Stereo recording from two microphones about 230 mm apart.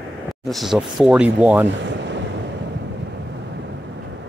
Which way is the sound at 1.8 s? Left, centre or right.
Right.